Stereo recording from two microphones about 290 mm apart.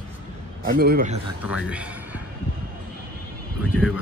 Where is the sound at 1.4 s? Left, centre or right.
Centre.